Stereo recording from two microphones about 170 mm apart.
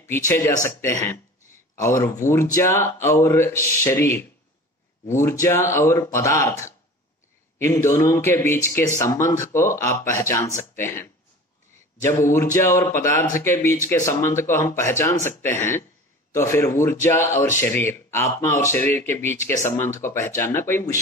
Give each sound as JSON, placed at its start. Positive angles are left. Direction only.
{"t": 0.0, "sound": "speech", "side_deg": 15}